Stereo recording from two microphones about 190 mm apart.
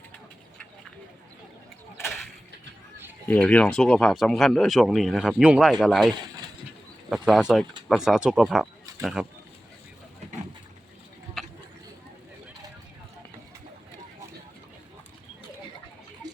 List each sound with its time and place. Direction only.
3.2 s speech: 5° left (ahead or behind)